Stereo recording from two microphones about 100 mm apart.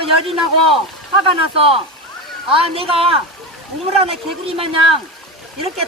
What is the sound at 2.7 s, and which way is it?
Speech, 70° right (ahead or behind).